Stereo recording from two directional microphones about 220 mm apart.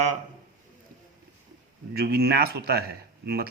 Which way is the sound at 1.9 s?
45° right (ahead or behind).